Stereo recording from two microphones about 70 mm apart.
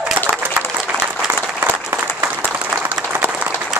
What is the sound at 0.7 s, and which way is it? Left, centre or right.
Applause, centre.